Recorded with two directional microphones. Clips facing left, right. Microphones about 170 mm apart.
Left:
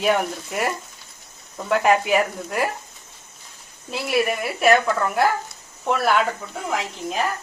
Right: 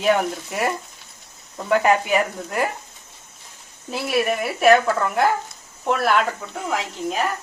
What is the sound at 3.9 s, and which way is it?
A woman's voice, centre (ahead or behind).